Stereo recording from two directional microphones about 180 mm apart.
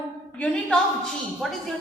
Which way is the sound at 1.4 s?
Centre (ahead or behind).